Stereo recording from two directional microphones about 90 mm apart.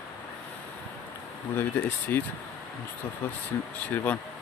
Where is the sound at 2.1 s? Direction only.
25° left (ahead or behind).